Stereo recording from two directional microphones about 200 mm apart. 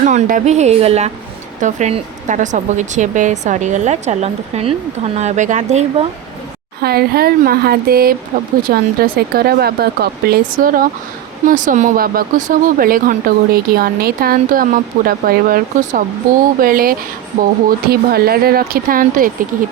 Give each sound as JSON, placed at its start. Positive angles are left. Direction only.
{"t": 0.0, "sound": "speech", "side_deg": -40}
{"t": 6.8, "sound": "speech", "side_deg": -50}